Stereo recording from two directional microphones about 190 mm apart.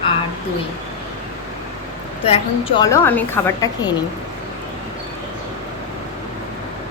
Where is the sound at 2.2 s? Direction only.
30° left (ahead or behind).